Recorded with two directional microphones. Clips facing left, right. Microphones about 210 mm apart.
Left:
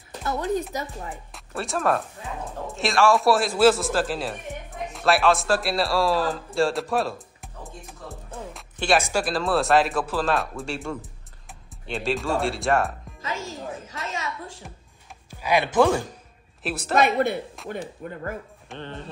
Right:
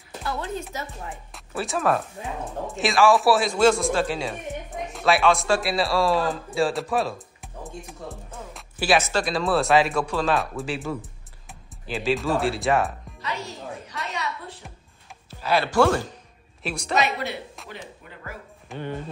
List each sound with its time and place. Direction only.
0.2 s speech: 20° left (ahead or behind)
1.3 s a man's voice: centre (ahead or behind)
8.5 s music: 5° right (ahead or behind)
9.0 s speech: 5° left (ahead or behind)
15.2 s speech: 15° left (ahead or behind)
16.6 s speech: 5° left (ahead or behind)
16.9 s speech: 50° left (ahead or behind)
18.8 s music: 10° right (ahead or behind)